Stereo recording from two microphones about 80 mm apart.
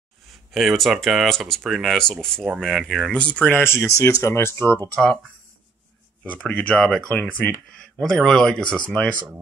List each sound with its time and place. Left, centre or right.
0.3 s speech: centre
3.1 s speech: centre
3.5 s speech: left
6.2 s speech: centre
8.0 s speech: centre